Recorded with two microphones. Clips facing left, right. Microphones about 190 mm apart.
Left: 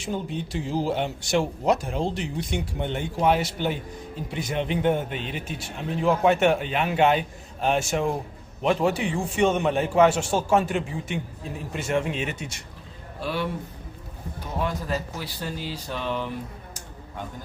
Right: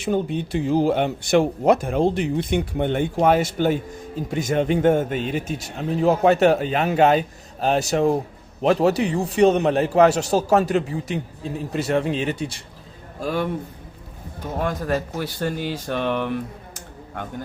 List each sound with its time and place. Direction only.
0.0 s a man's voice: 60° right (ahead or behind); by 12.6 s 30° right (ahead or behind)
13.2 s a man's voice: 45° right (ahead or behind)
14.6 s speech: 50° right (ahead or behind)